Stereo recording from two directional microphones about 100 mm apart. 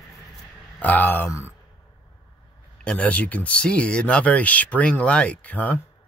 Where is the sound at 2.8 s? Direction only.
15° left (ahead or behind).